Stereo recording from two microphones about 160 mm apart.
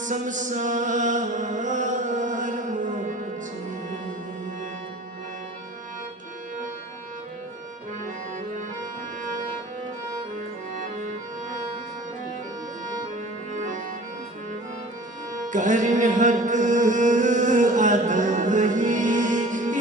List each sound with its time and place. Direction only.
0.0 s mantra: 50° right (ahead or behind)
13.5 s music: 50° right (ahead or behind)
15.4 s music: 50° right (ahead or behind)